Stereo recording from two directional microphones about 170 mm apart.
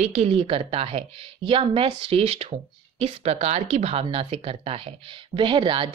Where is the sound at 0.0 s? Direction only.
40° right (ahead or behind).